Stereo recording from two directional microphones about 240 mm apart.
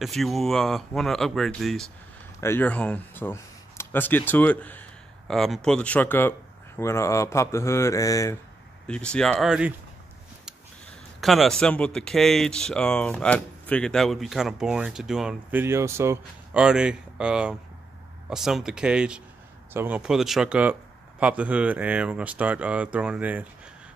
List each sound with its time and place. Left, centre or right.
0.0 s speech: centre
11.1 s speech: centre